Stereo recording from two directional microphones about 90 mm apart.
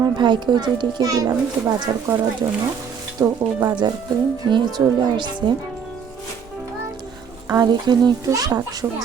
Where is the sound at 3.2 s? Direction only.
30° right (ahead or behind).